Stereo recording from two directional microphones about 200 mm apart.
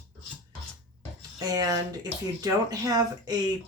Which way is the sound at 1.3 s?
20° right (ahead or behind).